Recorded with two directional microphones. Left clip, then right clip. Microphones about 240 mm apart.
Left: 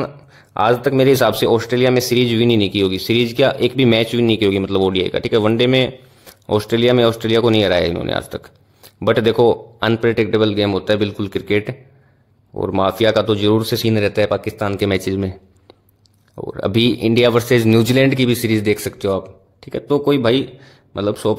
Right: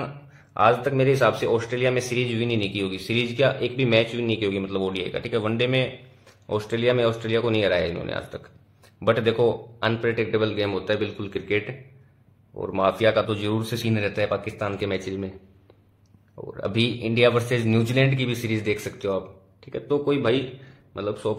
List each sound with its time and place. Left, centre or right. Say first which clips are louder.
0.6 s speech: left 5 dB; left
16.3 s speech: left 8 dB; left